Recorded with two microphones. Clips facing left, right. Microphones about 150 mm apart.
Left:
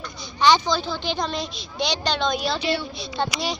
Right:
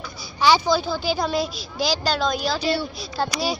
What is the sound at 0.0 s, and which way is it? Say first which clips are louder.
Speech: left 1 dB; 5° right (ahead or behind).